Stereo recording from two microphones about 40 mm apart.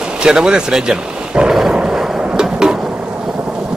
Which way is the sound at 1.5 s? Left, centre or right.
Centre.